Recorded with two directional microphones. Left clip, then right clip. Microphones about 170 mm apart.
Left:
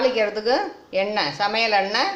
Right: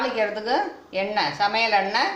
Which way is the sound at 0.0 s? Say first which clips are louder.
Left 4 dB; 60° left (ahead or behind).